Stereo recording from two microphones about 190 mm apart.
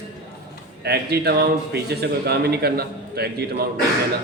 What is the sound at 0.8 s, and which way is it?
A man's voice, 60° right (ahead or behind).